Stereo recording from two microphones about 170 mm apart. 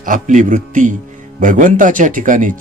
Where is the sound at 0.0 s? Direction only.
50° right (ahead or behind).